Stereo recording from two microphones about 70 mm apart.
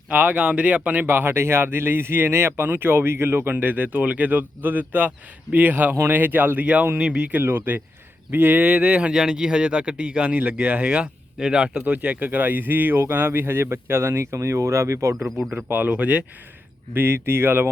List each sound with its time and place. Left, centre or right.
0.1 s speech: right
1.0 s speech: right
7.4 s speech: right
15.2 s speech: centre
15.7 s speech: right
16.9 s speech: right